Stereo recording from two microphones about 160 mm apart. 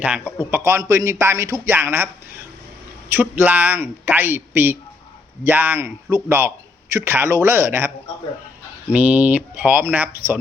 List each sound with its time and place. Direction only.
0.0 s a man's voice: 5° right (ahead or behind)
0.5 s a man's voice: 15° right (ahead or behind)
3.1 s a man's voice: 10° right (ahead or behind)